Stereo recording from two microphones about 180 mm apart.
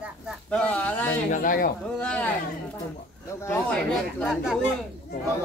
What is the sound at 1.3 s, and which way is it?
Speech, 50° left (ahead or behind).